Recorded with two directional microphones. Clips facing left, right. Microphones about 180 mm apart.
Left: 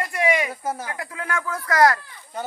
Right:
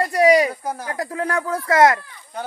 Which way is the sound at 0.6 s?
5° left (ahead or behind).